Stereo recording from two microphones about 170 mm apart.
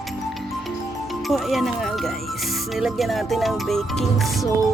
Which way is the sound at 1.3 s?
Centre (ahead or behind).